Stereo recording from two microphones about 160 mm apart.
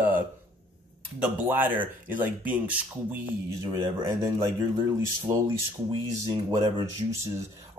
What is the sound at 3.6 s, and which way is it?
A man's voice, 20° right (ahead or behind).